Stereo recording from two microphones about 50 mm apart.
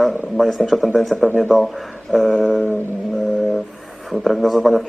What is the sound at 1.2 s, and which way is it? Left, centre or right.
Speech, right.